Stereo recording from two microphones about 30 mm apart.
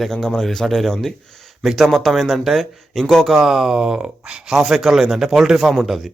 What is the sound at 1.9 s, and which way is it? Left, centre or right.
Speech, centre.